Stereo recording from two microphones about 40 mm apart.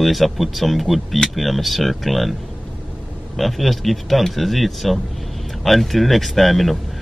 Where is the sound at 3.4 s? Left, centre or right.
Centre.